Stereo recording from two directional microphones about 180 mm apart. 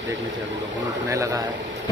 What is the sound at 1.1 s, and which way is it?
Speech, 15° right (ahead or behind).